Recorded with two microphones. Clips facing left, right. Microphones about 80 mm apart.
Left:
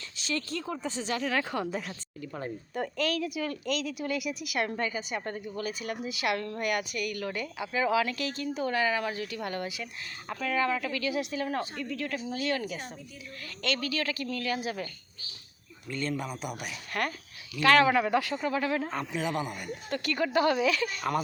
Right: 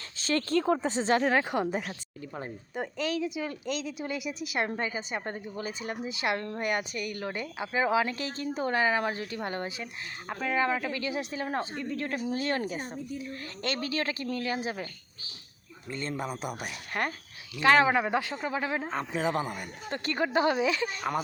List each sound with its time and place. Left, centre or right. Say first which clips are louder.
0.2 s speech: right 7 dB; right
0.8 s speech: right 6 dB; right
1.5 s speech: right 3 dB; right
15.9 s speech: left 1 dB; right
19.1 s speech: right 4 dB; right